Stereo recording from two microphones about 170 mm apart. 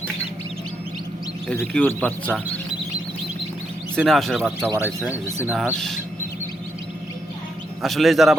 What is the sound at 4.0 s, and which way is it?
A man's voice, centre (ahead or behind).